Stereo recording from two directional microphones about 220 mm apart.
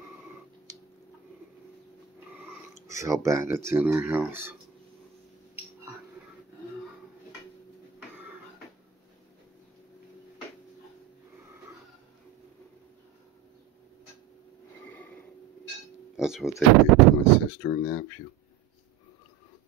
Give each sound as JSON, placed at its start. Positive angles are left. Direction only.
{"t": 2.1, "sound": "speech", "side_deg": -10}
{"t": 14.9, "sound": "a sound", "side_deg": 5}
{"t": 16.2, "sound": "speech", "side_deg": 0}
{"t": 17.6, "sound": "speech", "side_deg": 15}